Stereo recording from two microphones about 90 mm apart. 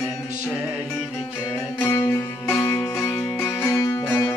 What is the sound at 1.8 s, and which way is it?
Music, 25° left (ahead or behind).